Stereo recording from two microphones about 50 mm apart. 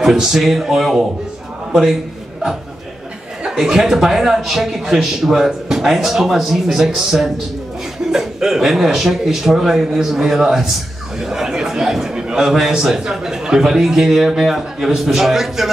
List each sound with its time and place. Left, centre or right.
0.0 s a man's voice: centre
3.4 s a man's voice: centre